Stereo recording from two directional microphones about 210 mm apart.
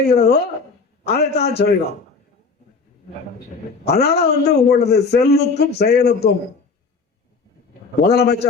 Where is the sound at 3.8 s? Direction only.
50° left (ahead or behind).